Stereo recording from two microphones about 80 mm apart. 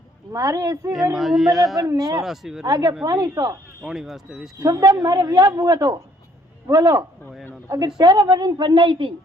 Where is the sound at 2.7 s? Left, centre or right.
Right.